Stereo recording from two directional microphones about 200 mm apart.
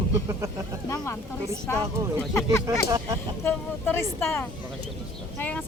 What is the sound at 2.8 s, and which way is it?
Speech, 15° right (ahead or behind).